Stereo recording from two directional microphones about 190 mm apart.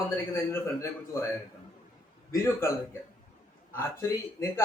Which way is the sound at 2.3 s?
15° left (ahead or behind).